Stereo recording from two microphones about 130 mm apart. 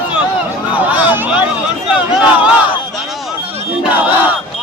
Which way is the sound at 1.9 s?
10° right (ahead or behind).